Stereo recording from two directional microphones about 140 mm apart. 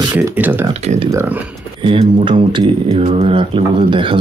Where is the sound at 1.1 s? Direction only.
20° right (ahead or behind).